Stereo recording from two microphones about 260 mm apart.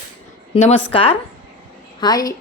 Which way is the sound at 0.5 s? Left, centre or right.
Left.